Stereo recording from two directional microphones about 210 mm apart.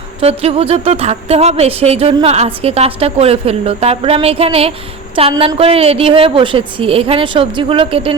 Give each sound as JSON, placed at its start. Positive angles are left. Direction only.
{"t": 0.2, "sound": "speech", "side_deg": -30}